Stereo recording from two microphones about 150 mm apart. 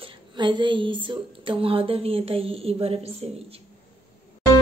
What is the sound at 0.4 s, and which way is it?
Speech, 30° right (ahead or behind).